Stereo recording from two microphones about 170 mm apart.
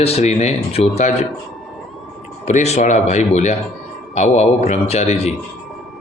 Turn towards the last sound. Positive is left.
turn(degrees=40)  # may be behind; listen again after turning